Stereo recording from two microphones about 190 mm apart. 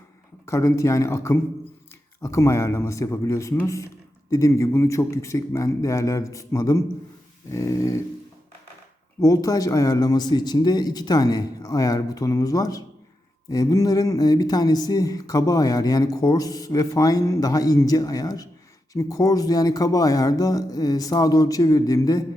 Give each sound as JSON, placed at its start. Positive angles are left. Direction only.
{"t": 0.4, "sound": "a man's voice", "side_deg": 15}
{"t": 9.2, "sound": "a man's voice", "side_deg": 20}